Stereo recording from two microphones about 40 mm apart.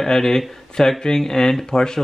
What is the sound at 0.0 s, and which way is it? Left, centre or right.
Speech, centre.